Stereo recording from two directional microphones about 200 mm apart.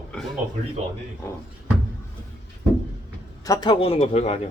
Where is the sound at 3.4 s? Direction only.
20° left (ahead or behind).